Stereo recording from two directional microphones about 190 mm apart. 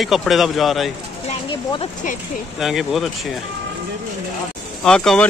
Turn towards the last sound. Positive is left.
turn(degrees=5)  # may be behind; listen again after turning